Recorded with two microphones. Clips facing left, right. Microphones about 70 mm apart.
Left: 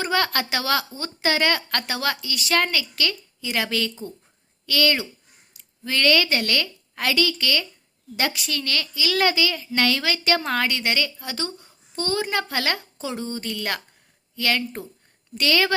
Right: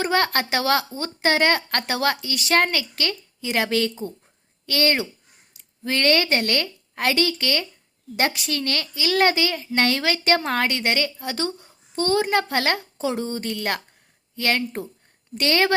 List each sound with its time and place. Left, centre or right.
0.0 s a woman's voice: right
13.0 s a woman's voice: right